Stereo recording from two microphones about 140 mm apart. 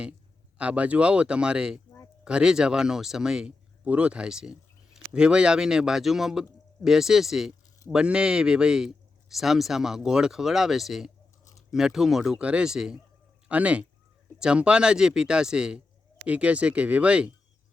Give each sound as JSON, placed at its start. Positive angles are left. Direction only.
{"t": 0.6, "sound": "speech", "side_deg": -10}